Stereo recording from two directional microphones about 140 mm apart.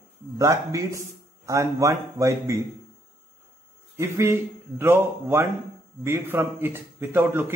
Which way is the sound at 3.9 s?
20° right (ahead or behind).